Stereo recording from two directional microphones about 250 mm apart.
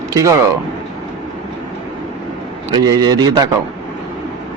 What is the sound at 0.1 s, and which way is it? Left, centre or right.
Speech, centre.